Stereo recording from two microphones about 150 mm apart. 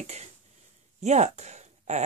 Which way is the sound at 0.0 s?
50° right (ahead or behind).